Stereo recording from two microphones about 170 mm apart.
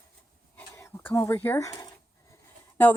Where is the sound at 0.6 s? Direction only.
15° left (ahead or behind).